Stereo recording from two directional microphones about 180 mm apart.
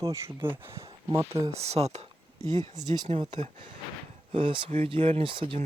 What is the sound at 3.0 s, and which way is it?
Speech, 30° right (ahead or behind).